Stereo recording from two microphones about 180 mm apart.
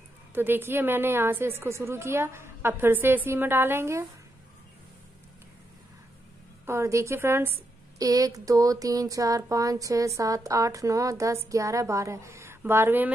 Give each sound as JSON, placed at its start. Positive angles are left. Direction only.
{"t": 0.3, "sound": "speech", "side_deg": -10}
{"t": 6.6, "sound": "speech", "side_deg": -15}